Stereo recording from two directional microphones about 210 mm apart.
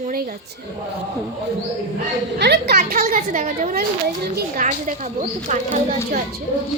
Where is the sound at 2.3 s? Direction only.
50° right (ahead or behind).